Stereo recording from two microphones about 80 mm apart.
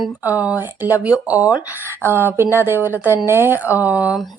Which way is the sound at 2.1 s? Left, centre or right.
Right.